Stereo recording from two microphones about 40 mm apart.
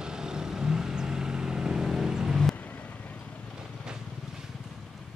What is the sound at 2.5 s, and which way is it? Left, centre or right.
Vehicle, left.